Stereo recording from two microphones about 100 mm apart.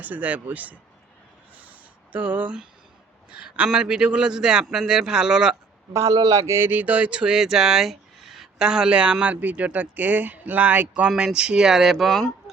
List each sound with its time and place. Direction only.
0.0 s speech: 15° right (ahead or behind)
2.1 s speech: 15° right (ahead or behind)
5.9 s speech: 35° right (ahead or behind); by 12.3 s centre (ahead or behind)